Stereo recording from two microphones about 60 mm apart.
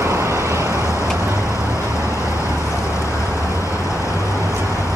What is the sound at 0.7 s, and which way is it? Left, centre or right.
Vehicle, left.